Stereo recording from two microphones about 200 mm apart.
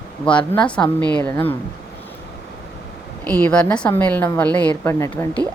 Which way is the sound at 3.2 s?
5° left (ahead or behind).